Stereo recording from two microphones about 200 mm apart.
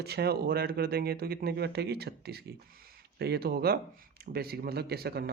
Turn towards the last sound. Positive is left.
turn(degrees=-50)  # may be behind; listen again after turning